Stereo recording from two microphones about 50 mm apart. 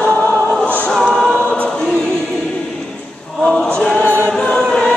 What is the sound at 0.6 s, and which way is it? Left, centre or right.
Music, left.